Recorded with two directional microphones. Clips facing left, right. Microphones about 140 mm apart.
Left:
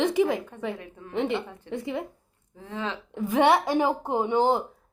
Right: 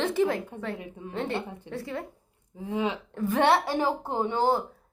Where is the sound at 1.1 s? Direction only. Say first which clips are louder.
Left 4 dB; 15° left (ahead or behind).